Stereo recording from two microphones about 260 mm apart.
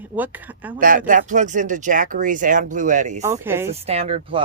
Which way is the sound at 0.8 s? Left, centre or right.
Right.